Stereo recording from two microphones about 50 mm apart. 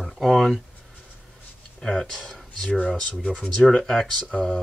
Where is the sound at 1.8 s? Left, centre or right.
Centre.